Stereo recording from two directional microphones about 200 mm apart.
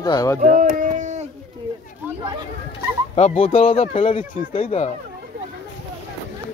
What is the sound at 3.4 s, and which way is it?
Speech, 30° left (ahead or behind).